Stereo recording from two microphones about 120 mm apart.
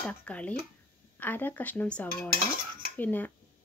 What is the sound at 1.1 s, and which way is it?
Speech, 15° left (ahead or behind).